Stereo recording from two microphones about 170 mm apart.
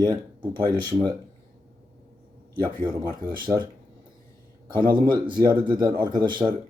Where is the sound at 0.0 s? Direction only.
25° right (ahead or behind).